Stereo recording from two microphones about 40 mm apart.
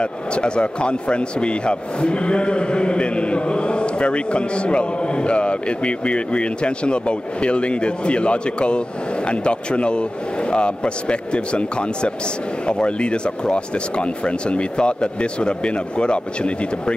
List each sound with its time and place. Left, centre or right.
0.0 s speech: left